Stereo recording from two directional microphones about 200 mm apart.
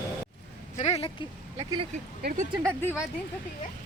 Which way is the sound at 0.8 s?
30° left (ahead or behind).